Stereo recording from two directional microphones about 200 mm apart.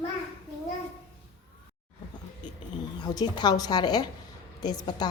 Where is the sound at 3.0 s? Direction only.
20° left (ahead or behind).